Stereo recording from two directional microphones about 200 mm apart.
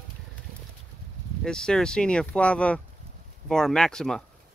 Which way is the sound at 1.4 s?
5° left (ahead or behind).